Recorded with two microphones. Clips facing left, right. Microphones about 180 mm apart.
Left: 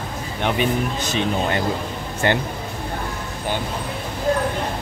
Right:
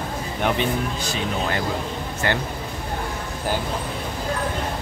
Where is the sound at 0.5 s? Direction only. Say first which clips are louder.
Left 2 dB; 20° left (ahead or behind).